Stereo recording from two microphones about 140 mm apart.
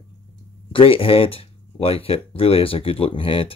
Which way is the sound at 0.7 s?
40° left (ahead or behind).